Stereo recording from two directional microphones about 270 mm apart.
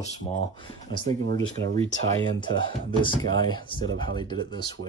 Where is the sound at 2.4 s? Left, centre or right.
Centre.